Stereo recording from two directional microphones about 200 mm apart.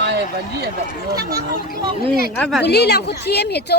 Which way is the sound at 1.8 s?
25° right (ahead or behind).